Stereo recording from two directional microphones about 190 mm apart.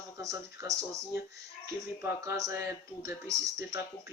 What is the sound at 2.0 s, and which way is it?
Speech, 15° right (ahead or behind).